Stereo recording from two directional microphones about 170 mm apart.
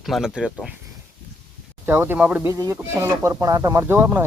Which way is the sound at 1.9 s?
15° right (ahead or behind).